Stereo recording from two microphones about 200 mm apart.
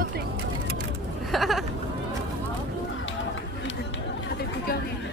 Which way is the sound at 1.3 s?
Centre (ahead or behind).